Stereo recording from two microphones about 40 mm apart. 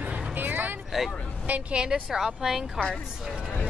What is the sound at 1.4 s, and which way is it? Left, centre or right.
Speech, right.